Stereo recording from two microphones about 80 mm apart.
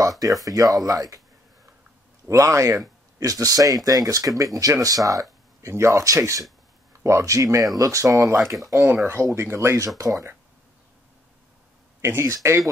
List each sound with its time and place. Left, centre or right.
0.2 s speech: right
2.2 s speech: right
5.6 s speech: right
8.4 s speech: centre
8.6 s speech: right
12.0 s speech: right